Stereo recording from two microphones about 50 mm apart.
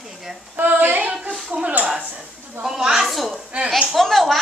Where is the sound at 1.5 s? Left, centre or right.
Right.